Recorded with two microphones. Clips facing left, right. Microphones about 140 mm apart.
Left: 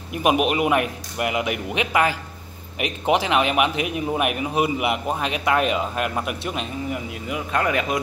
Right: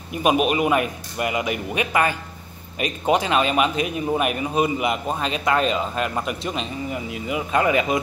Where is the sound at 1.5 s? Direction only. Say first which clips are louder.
Even; 90° left.